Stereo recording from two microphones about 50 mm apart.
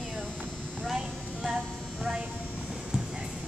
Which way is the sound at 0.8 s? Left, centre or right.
Centre.